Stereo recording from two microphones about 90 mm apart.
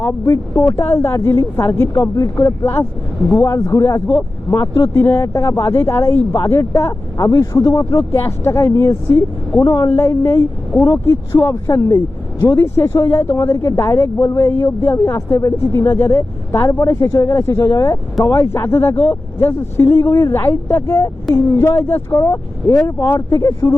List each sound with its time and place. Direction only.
0.0 s speech: 35° left (ahead or behind)